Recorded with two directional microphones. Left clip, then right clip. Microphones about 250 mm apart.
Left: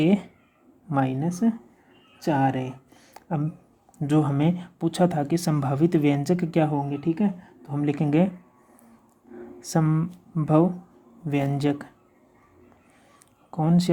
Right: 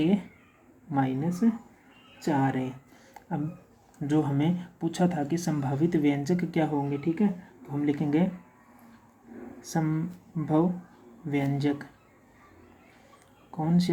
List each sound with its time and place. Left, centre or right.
0.0 s speech: left
3.2 s a sound: left
4.0 s speech: left
9.6 s speech: left
13.5 s speech: left